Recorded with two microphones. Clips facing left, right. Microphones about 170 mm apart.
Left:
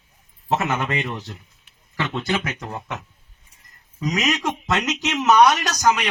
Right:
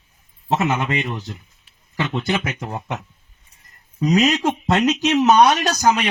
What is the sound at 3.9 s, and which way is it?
Speech, 35° right (ahead or behind).